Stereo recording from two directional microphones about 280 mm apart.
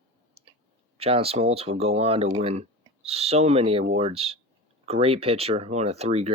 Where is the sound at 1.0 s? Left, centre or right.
Right.